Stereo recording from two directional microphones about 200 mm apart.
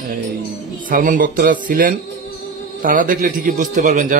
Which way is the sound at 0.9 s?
45° right (ahead or behind).